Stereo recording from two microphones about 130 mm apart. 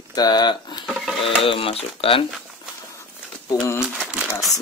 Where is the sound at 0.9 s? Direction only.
5° right (ahead or behind).